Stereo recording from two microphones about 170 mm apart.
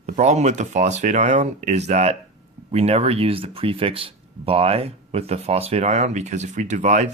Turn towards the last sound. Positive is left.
turn(degrees=-45)  # may be behind; listen again after turning